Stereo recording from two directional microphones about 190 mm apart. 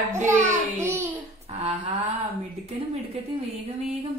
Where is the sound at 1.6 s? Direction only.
30° right (ahead or behind).